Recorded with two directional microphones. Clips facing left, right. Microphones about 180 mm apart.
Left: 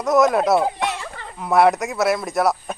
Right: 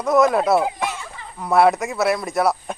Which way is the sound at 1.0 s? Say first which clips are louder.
Left 3 dB; 65° left (ahead or behind).